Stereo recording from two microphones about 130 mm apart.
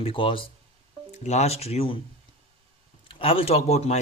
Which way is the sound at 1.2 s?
55° left (ahead or behind).